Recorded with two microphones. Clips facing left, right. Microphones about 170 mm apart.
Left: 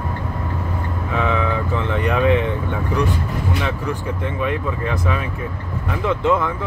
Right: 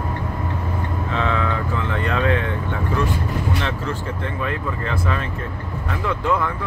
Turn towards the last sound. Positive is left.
turn(degrees=20)  # may be behind; listen again after turning